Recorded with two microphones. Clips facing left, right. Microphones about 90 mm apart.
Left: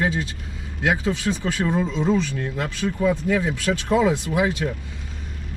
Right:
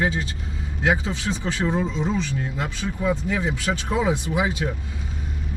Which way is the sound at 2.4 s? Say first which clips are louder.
Left 2 dB; 10° right (ahead or behind).